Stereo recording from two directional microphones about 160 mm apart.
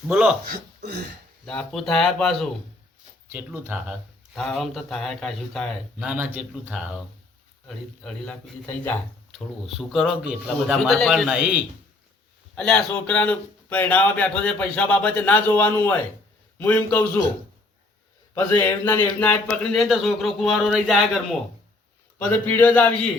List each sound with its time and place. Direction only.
0.1 s speech: 5° right (ahead or behind)
0.4 s speech: 90° right
1.5 s speech: 5° left (ahead or behind)
3.3 s speech: 15° right (ahead or behind)
4.4 s speech: centre (ahead or behind)
6.1 s speech: 10° right (ahead or behind)
8.0 s speech: 5° left (ahead or behind)
9.3 s speech: centre (ahead or behind)
12.5 s speech: 5° left (ahead or behind)
18.3 s speech: 15° left (ahead or behind)
22.2 s speech: 15° left (ahead or behind)